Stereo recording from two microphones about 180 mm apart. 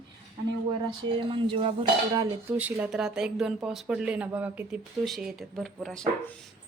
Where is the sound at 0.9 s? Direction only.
30° right (ahead or behind).